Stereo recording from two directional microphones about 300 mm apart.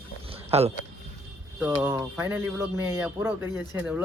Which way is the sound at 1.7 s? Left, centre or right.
Centre.